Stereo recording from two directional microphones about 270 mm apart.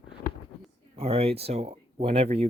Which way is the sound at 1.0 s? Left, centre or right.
Right.